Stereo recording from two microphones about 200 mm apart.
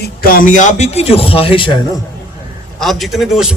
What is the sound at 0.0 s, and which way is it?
A man's voice, 50° left (ahead or behind).